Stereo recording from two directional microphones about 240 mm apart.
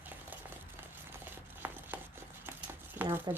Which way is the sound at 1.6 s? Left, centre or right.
Centre.